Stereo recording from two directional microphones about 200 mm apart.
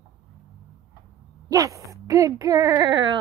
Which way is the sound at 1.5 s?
15° right (ahead or behind).